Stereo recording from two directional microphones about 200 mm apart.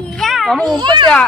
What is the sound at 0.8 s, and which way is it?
Speech, 20° right (ahead or behind).